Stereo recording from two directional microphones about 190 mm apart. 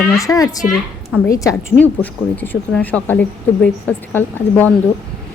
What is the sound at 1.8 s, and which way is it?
Speech, 10° left (ahead or behind).